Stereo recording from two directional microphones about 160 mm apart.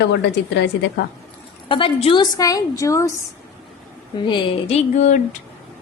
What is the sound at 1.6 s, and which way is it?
A woman's voice, 35° left (ahead or behind).